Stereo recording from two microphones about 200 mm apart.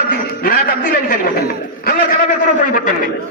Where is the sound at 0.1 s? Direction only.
45° left (ahead or behind).